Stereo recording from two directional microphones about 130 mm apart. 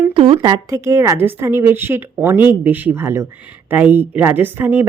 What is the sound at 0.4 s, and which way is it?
A woman's voice, 25° right (ahead or behind).